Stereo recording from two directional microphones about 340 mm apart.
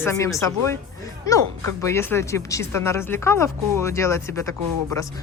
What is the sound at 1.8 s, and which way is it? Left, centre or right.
Speech, centre.